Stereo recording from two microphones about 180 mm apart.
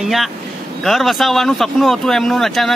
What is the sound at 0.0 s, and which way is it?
Speech, centre (ahead or behind).